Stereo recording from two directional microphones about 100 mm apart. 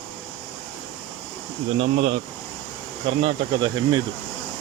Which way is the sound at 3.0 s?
55° right (ahead or behind).